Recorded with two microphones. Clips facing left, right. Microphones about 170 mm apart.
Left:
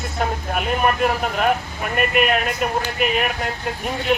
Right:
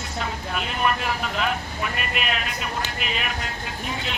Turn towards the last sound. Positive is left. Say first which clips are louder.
# left 6 dB
turn(degrees=55)  # may be behind; listen again after turning